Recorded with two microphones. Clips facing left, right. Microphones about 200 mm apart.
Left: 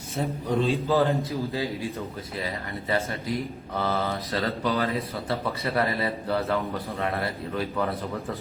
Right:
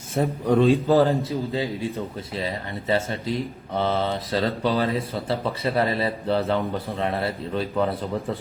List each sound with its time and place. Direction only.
0.2 s a man's voice: 55° right (ahead or behind)
1.3 s speech: 25° right (ahead or behind)